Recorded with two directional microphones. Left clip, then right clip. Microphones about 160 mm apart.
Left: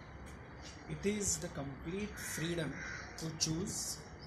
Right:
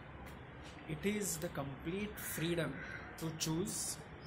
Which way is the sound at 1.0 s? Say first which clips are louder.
Left 2 dB; 10° right (ahead or behind).